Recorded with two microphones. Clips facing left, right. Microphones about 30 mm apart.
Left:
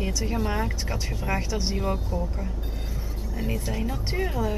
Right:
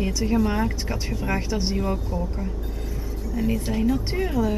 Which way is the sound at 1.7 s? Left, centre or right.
Centre.